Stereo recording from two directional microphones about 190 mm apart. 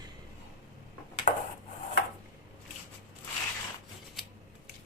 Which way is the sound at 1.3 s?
40° left (ahead or behind).